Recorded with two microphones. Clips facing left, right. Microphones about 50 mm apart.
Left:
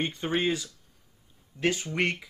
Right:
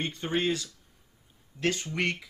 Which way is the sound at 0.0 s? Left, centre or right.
Centre.